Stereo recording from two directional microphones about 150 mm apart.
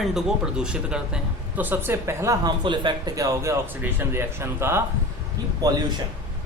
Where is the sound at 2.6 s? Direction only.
30° right (ahead or behind); by 4.8 s 15° right (ahead or behind).